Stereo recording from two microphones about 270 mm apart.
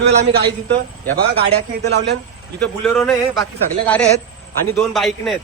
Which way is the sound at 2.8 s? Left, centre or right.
Centre.